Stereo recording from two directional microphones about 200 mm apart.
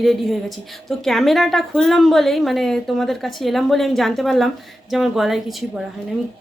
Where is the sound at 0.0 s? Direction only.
Centre (ahead or behind).